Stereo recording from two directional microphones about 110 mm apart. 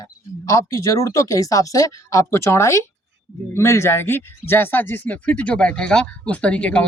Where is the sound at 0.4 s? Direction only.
30° left (ahead or behind).